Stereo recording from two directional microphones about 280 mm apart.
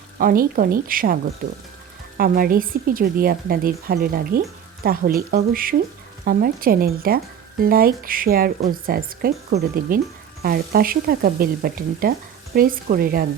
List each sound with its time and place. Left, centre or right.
0.2 s speech: right